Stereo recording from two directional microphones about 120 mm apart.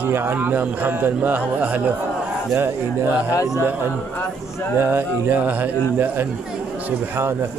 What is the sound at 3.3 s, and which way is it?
Speech, 25° left (ahead or behind).